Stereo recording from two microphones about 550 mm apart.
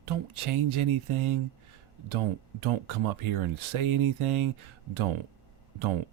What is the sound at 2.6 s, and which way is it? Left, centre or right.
Speech, right.